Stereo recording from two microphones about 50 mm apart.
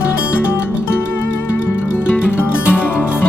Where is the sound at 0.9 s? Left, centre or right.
Left.